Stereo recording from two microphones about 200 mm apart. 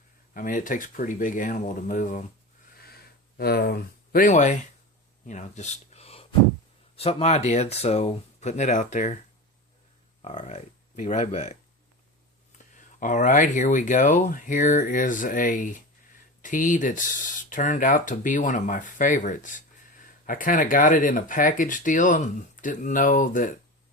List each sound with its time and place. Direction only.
0.3 s speech: 40° left (ahead or behind)
2.7 s a sound: 50° left (ahead or behind)
5.2 s speech: 35° left (ahead or behind)
10.2 s speech: 35° left (ahead or behind)
12.7 s speech: 40° left (ahead or behind)